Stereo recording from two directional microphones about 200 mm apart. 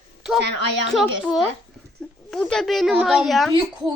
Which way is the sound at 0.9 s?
Centre (ahead or behind).